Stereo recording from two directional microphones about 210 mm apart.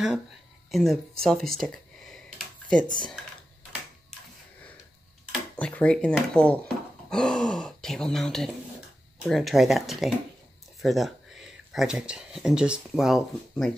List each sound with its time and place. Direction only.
0.7 s speech: centre (ahead or behind)
1.5 s a sound: centre (ahead or behind)
5.3 s speech: 5° left (ahead or behind)